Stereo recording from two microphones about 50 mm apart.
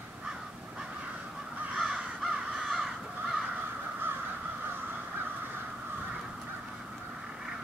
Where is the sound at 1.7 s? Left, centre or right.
Centre.